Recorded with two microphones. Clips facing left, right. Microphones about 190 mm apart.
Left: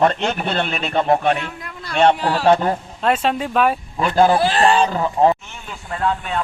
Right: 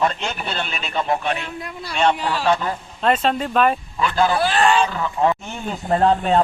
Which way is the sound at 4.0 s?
50° left (ahead or behind).